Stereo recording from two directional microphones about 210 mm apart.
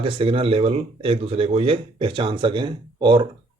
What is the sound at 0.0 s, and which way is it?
Speech, 25° right (ahead or behind).